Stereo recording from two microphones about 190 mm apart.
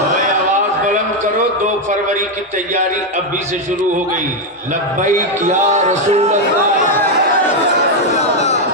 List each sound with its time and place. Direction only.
5.0 s a man's voice: 40° right (ahead or behind)